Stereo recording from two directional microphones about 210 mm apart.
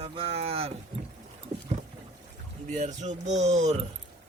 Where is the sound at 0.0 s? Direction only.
30° right (ahead or behind).